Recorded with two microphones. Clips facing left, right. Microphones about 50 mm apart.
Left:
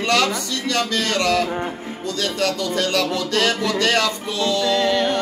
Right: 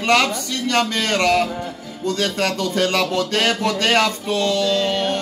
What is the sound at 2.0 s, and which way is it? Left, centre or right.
Music, right.